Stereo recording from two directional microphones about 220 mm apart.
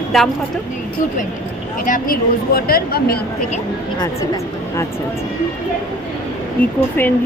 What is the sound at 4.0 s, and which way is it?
Speech, 15° left (ahead or behind).